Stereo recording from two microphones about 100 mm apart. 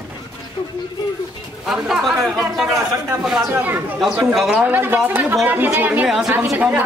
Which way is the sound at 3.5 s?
20° right (ahead or behind).